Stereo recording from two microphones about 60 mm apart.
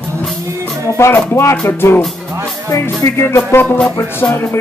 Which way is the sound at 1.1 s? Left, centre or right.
Left.